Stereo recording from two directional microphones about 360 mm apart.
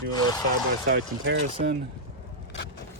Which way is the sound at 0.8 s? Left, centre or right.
Right.